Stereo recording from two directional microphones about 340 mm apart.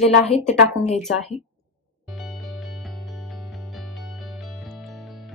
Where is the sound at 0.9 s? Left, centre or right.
Centre.